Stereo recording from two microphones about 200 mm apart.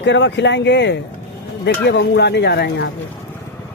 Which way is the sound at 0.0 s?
65° left (ahead or behind).